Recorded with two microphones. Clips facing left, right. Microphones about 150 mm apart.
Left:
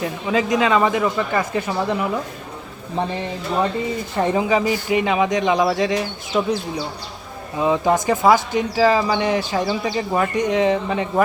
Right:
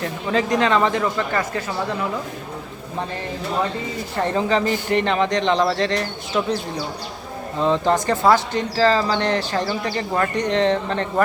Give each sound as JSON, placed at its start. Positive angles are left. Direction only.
{"t": 0.0, "sound": "speech", "side_deg": 5}
{"t": 4.2, "sound": "speech", "side_deg": 15}
{"t": 7.6, "sound": "speech", "side_deg": 10}